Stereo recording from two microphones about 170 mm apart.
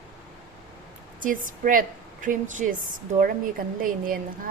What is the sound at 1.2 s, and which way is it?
A woman's voice, 55° right (ahead or behind).